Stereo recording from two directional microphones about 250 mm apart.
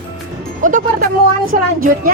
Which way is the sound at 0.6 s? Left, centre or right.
Right.